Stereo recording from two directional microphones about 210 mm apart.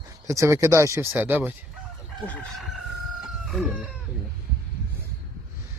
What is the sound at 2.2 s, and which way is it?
Speech, 5° left (ahead or behind).